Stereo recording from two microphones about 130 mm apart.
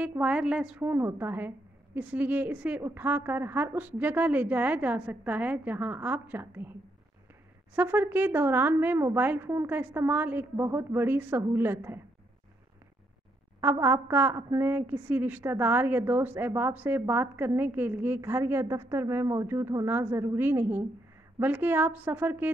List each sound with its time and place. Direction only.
0.0 s a woman's voice: 10° right (ahead or behind)
7.7 s a woman's voice: 15° right (ahead or behind)
13.6 s a woman's voice: 15° right (ahead or behind)